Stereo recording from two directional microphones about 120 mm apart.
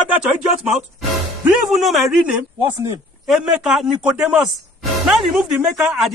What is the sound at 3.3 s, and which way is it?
Speech, 5° right (ahead or behind).